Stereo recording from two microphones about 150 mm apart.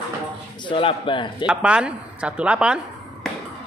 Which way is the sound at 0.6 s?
35° left (ahead or behind).